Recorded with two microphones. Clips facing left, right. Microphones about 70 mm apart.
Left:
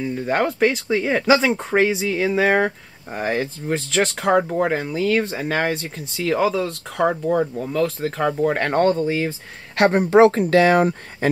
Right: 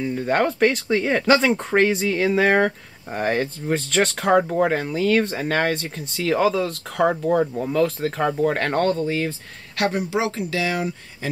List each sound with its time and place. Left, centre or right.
0.0 s speech: centre
9.8 s speech: left